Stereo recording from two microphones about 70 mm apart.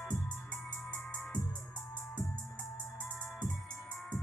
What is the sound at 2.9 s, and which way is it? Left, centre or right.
Music, centre.